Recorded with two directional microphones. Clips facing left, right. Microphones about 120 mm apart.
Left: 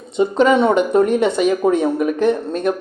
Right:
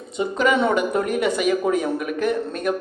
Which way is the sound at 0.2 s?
25° left (ahead or behind).